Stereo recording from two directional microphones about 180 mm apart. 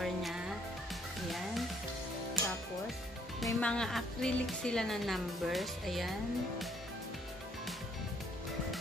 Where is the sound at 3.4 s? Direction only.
5° left (ahead or behind).